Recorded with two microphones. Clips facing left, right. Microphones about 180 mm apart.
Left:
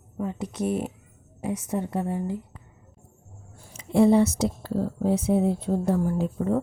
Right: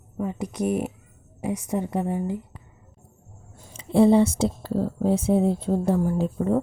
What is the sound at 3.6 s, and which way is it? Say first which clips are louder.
Speech: right 2 dB; 25° right (ahead or behind).